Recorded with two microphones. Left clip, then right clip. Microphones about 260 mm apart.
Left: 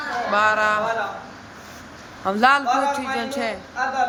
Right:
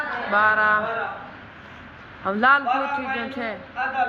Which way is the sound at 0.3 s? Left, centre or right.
Centre.